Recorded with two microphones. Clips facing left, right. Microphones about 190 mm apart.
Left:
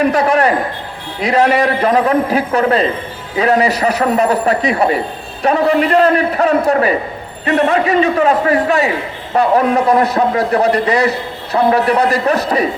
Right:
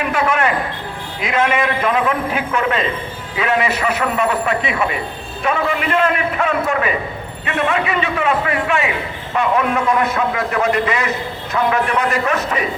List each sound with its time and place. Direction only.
0.0 s a man's voice: 40° left (ahead or behind)